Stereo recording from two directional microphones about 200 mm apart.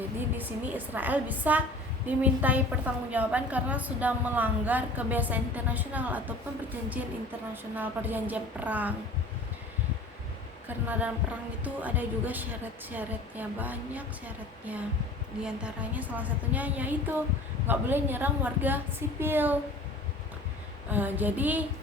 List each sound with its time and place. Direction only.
0.3 s a woman's voice: 10° right (ahead or behind)
10.7 s a woman's voice: 10° right (ahead or behind)
20.9 s a woman's voice: 10° right (ahead or behind)